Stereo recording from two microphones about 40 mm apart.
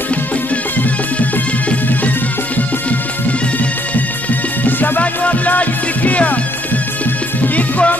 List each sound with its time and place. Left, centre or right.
4.6 s music: left
5.0 s music: left
7.4 s music: left